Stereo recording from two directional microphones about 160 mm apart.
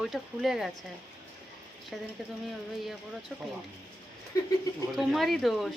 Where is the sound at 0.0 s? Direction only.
Centre (ahead or behind).